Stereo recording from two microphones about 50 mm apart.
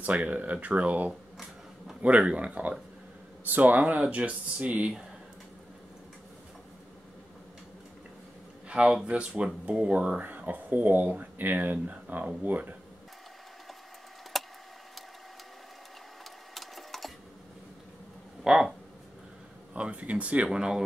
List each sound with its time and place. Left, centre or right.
0.0 s speech: right
8.6 s speech: centre; by 12.7 s right
14.3 s a sound: centre
16.5 s sewing machine: centre
18.4 s speech: centre
19.7 s speech: right
20.5 s speech: centre